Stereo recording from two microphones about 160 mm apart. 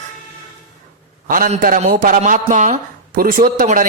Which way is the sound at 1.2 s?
60° right (ahead or behind).